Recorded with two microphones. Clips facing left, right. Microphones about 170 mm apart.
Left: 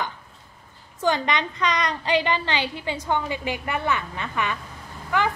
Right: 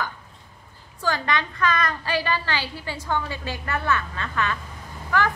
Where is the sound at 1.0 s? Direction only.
20° left (ahead or behind).